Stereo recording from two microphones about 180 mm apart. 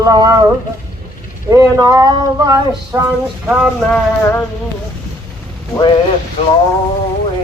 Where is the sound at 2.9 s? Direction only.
15° right (ahead or behind).